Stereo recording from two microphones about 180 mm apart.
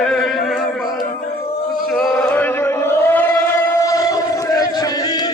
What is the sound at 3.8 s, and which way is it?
Battle cry, 20° left (ahead or behind).